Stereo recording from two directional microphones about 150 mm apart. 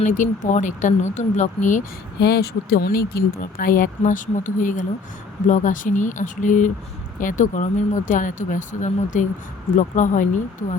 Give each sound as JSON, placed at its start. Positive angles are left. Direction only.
{"t": 0.0, "sound": "speech", "side_deg": 55}